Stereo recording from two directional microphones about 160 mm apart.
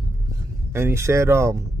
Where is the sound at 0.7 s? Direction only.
15° right (ahead or behind).